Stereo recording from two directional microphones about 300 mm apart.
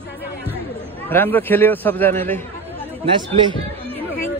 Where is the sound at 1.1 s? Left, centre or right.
Centre.